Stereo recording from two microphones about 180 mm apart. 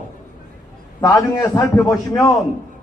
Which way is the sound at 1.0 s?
20° left (ahead or behind).